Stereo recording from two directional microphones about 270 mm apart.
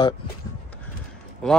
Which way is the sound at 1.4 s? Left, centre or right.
Centre.